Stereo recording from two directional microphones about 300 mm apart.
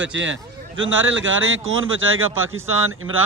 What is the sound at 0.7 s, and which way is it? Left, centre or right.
A man's voice, right.